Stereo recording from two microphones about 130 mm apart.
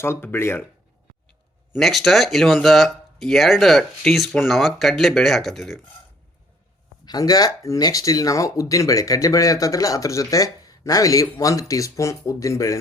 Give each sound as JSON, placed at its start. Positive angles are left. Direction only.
{"t": 0.0, "sound": "speech", "side_deg": 15}
{"t": 1.7, "sound": "speech", "side_deg": 0}
{"t": 7.0, "sound": "speech", "side_deg": 30}